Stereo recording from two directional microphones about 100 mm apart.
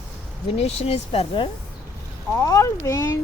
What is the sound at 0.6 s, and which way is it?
Speech, 90° left.